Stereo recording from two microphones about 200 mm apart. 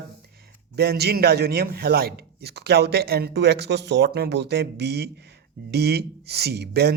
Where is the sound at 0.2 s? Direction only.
50° right (ahead or behind).